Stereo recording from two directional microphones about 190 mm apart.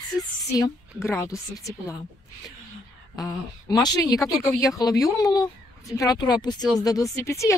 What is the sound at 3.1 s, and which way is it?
Speech, 20° left (ahead or behind).